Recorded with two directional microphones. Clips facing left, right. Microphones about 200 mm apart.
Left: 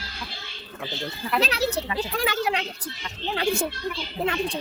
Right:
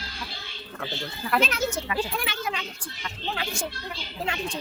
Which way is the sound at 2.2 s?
85° left.